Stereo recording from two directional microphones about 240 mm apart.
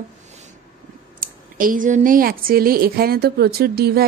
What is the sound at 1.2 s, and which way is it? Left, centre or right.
A woman's voice, right.